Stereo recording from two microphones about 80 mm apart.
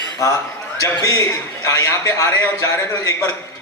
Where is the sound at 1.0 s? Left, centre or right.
Left.